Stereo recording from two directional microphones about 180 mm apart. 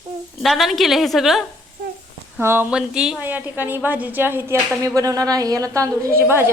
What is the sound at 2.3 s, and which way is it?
A woman's voice, 10° right (ahead or behind).